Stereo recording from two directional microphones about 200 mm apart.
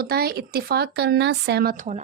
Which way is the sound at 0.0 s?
50° right (ahead or behind).